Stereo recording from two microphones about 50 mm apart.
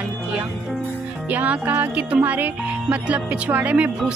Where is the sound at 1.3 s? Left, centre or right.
Right.